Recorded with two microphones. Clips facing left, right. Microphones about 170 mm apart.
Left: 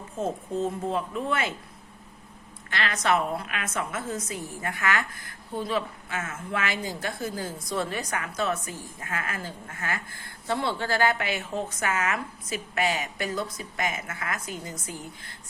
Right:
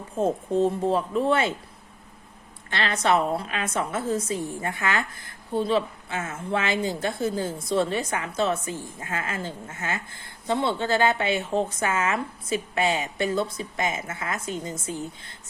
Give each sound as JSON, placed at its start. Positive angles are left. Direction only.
{"t": 0.2, "sound": "speech", "side_deg": -30}
{"t": 2.6, "sound": "a woman's voice", "side_deg": -30}